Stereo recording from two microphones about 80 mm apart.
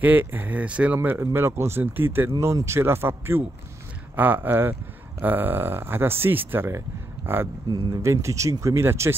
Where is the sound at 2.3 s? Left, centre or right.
Right.